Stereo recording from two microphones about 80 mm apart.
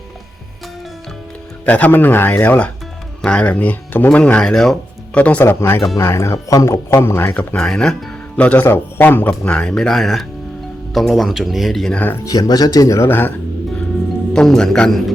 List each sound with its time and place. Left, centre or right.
1.6 s speech: centre
4.2 s speech: centre
5.1 s speech: centre
5.5 s speech: left
7.5 s speech: centre
9.4 s speech: centre
12.2 s speech: left
13.1 s speech: left
14.3 s speech: centre